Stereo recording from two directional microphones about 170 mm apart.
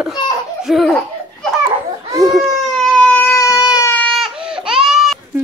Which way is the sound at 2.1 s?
20° right (ahead or behind).